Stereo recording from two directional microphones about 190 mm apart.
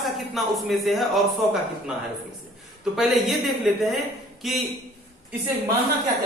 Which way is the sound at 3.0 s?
Centre (ahead or behind).